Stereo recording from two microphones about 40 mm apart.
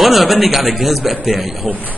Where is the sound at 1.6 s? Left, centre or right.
Right.